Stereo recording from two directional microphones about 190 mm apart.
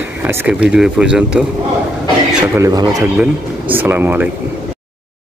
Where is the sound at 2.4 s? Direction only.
15° right (ahead or behind).